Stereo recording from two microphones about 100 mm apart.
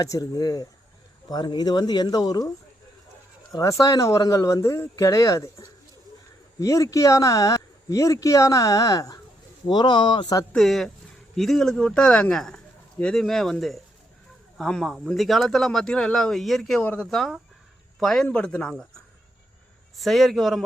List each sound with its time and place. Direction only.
0.0 s speech: 35° left (ahead or behind)
3.5 s speech: 35° left (ahead or behind)
9.6 s speech: 50° left (ahead or behind)
10.5 s speech: centre (ahead or behind)
16.8 s speech: 15° left (ahead or behind)
17.1 s speech: centre (ahead or behind)
20.0 s speech: centre (ahead or behind)